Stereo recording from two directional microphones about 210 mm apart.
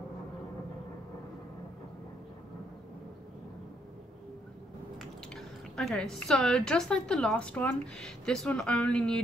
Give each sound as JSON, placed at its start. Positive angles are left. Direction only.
{"t": 4.9, "sound": "speech", "side_deg": 0}